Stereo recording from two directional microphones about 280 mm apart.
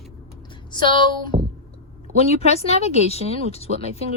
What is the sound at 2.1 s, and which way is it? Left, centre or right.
Speech, left.